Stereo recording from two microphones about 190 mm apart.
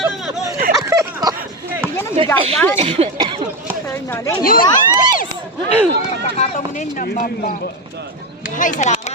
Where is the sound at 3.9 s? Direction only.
15° left (ahead or behind).